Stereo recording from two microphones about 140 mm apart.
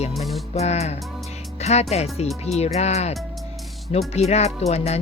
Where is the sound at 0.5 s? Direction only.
50° left (ahead or behind).